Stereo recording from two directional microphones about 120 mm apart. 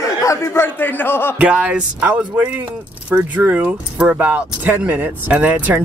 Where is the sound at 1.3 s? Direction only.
10° right (ahead or behind).